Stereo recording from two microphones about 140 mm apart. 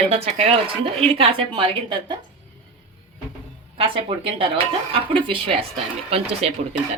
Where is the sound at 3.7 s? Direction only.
40° right (ahead or behind).